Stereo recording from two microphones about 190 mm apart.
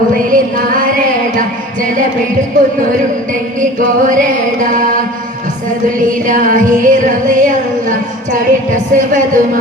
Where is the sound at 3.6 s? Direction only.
45° right (ahead or behind).